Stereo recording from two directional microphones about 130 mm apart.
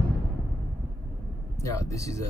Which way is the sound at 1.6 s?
25° left (ahead or behind).